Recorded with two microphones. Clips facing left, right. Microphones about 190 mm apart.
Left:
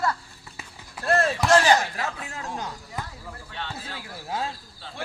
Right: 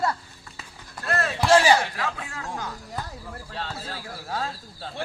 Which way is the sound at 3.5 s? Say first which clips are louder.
Right 2 dB; 35° right (ahead or behind).